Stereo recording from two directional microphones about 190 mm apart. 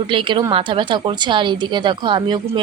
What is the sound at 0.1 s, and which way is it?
A woman's voice, 25° right (ahead or behind).